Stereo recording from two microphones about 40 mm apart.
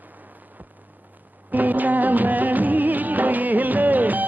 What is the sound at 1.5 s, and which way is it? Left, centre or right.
Music of bollywood, right.